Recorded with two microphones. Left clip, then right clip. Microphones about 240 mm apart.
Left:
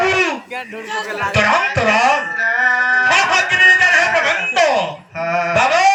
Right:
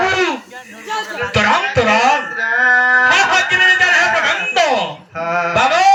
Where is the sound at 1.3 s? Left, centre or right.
Centre.